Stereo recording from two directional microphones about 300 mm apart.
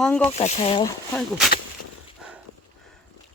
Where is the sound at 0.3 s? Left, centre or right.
Centre.